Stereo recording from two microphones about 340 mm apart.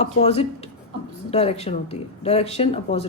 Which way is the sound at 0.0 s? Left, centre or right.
Centre.